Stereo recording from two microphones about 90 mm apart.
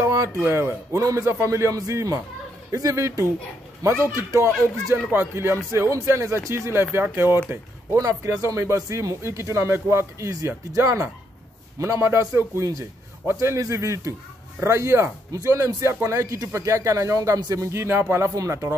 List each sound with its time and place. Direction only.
0.0 s a sound: 35° right (ahead or behind)
0.4 s speech: 30° right (ahead or behind)
8.0 s speech: 35° right (ahead or behind)
17.4 s speech: 45° right (ahead or behind)
17.6 s speech: 30° right (ahead or behind)